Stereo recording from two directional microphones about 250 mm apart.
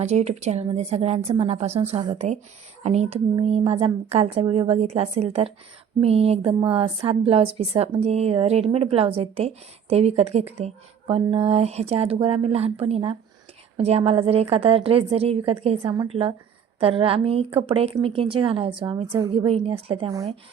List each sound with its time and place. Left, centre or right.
0.0 s speech: right